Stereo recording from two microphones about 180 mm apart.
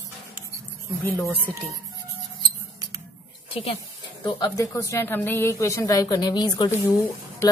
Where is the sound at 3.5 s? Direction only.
30° left (ahead or behind).